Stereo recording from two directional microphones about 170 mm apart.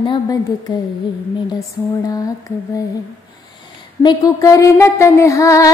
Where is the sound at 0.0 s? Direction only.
25° left (ahead or behind).